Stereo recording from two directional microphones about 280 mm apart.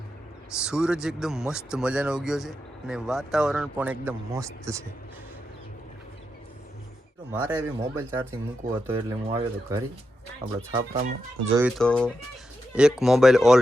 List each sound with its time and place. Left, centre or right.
0.6 s speech: centre
7.3 s speech: centre
10.4 s speech: right
11.8 s speech: centre